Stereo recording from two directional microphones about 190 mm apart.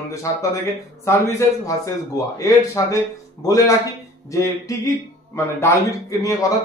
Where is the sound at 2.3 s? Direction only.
15° left (ahead or behind).